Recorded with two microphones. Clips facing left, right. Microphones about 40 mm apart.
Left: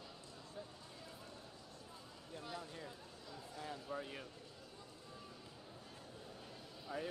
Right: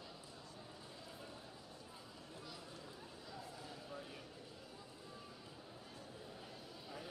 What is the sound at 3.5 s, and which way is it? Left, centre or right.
Vehicle, left.